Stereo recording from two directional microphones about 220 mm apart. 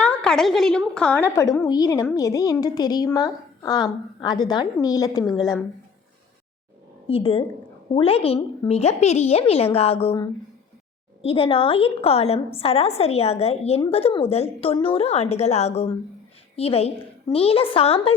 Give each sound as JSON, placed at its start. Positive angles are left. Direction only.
{"t": 0.0, "sound": "a sound", "side_deg": 5}
{"t": 0.9, "sound": "a woman's voice", "side_deg": 5}
{"t": 7.1, "sound": "a woman's voice", "side_deg": 25}